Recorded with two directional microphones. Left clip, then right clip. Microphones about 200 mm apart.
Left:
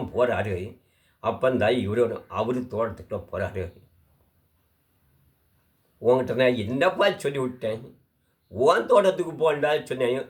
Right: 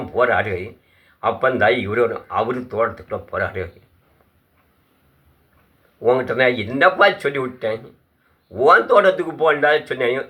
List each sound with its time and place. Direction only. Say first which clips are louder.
0.2 s speech: right 6 dB; 20° left (ahead or behind)
6.1 s speech: right 4 dB; 25° left (ahead or behind)